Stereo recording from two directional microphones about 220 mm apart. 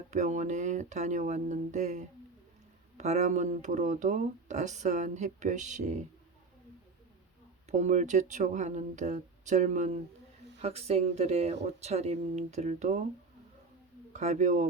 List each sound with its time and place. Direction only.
0.1 s speech: 35° right (ahead or behind)
7.7 s speech: 30° right (ahead or behind)
14.1 s a man's voice: 30° right (ahead or behind)